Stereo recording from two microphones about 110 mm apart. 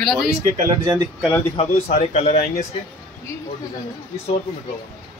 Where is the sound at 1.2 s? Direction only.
20° left (ahead or behind).